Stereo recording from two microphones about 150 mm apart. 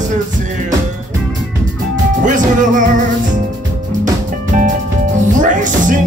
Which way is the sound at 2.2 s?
60° right (ahead or behind).